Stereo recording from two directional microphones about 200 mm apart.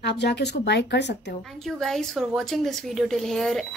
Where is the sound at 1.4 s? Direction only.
Centre (ahead or behind).